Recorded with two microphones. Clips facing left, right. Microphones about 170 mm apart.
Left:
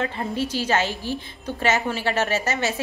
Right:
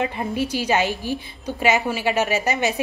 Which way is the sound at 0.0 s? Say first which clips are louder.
Right 2 dB; 15° right (ahead or behind).